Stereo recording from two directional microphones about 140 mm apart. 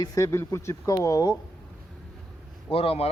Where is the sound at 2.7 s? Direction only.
45° left (ahead or behind).